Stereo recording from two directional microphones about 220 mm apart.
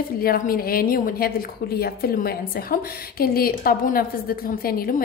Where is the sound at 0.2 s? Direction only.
40° left (ahead or behind).